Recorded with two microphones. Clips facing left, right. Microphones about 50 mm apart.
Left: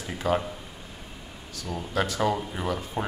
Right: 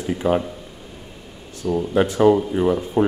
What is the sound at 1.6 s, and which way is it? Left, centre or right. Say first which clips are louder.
Speech: right 12 dB; right.